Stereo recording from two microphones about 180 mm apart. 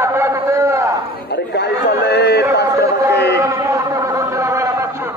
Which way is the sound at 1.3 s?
70° left (ahead or behind).